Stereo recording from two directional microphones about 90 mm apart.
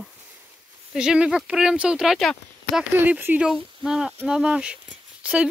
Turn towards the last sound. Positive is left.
turn(degrees=-15)  # may be behind; listen again after turning